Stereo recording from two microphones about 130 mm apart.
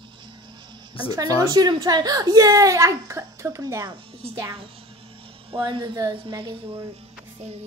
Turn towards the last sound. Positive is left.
turn(degrees=-35)  # may be behind; listen again after turning